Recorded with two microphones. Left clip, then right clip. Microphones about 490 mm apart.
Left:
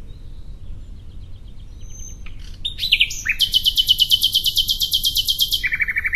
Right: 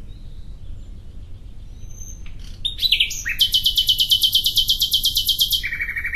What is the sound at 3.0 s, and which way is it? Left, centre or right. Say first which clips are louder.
Chirp: left 1 dB; centre.